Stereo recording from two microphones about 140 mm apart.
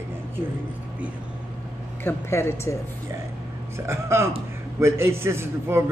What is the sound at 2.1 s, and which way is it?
Speech, 20° left (ahead or behind).